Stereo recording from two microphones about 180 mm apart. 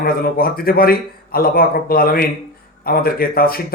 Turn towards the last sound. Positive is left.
turn(degrees=55)  # may be behind; listen again after turning